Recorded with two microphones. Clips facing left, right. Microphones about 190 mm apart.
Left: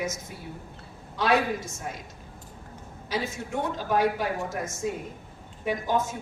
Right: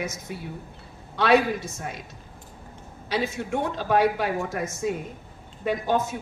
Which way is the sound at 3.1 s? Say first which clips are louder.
Right 4 dB; 70° right (ahead or behind).